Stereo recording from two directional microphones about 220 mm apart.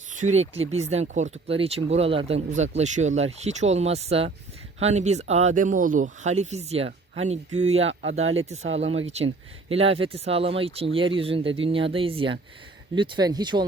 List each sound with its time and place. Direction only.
0.1 s speech: 35° right (ahead or behind)